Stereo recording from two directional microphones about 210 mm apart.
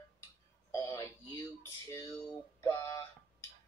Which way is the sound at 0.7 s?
15° left (ahead or behind).